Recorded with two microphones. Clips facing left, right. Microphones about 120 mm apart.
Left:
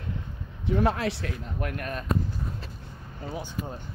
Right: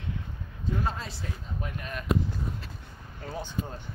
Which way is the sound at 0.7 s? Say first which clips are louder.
Left 8 dB; 75° left (ahead or behind).